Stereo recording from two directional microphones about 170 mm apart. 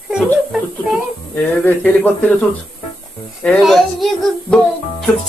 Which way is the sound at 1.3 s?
10° left (ahead or behind).